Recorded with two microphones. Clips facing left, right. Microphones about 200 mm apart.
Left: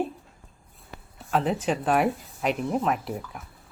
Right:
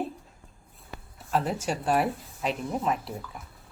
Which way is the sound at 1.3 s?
Centre (ahead or behind).